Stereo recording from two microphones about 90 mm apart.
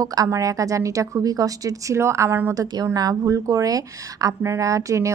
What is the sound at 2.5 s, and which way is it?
A woman's voice, 45° right (ahead or behind).